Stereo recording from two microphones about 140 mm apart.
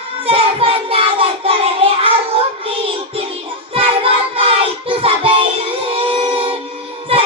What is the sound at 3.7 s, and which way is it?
Child singing, 40° right (ahead or behind).